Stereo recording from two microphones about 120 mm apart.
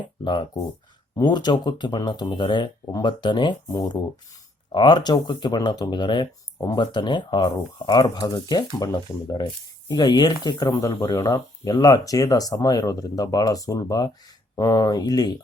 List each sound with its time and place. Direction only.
0.3 s speech: 40° left (ahead or behind)
4.7 s speech: 40° left (ahead or behind)